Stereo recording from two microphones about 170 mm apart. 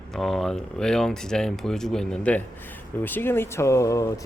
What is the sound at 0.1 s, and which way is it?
Speech, centre (ahead or behind).